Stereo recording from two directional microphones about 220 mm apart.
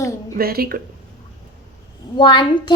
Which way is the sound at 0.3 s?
45° right (ahead or behind).